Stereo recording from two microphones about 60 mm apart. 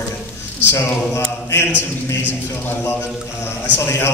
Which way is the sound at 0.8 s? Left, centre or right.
Left.